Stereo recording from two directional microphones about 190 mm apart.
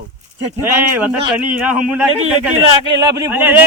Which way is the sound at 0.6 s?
10° right (ahead or behind).